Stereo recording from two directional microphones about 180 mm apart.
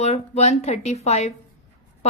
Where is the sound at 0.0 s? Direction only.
35° left (ahead or behind).